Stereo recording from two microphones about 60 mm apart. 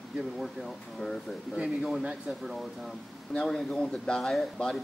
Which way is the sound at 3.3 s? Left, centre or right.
Centre.